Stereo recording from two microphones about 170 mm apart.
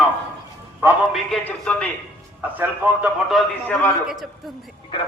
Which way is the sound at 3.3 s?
5° left (ahead or behind).